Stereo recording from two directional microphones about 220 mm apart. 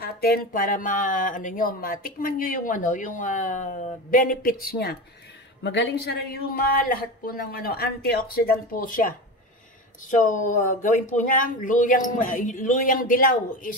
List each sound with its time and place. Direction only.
0.0 s speech: 40° left (ahead or behind)
10.1 s speech: 35° left (ahead or behind)